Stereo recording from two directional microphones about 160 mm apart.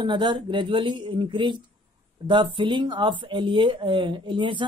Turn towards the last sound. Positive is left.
turn(degrees=-30)  # may be behind; listen again after turning